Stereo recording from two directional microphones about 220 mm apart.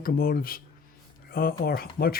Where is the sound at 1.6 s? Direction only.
45° left (ahead or behind).